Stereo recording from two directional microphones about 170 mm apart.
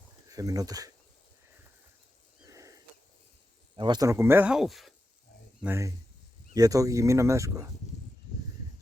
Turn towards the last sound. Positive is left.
turn(degrees=-20)  # may be behind; listen again after turning